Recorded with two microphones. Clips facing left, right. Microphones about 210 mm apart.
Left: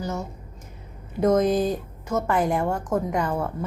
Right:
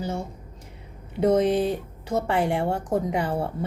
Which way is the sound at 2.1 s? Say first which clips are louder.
Left 1 dB; 30° right (ahead or behind).